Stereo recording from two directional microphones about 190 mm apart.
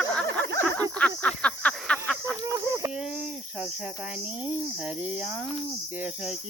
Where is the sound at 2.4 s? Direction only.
15° right (ahead or behind).